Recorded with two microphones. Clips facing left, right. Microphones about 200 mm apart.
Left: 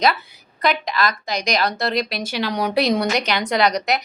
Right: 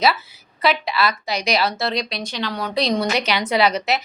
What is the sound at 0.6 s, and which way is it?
A woman's voice, 5° right (ahead or behind).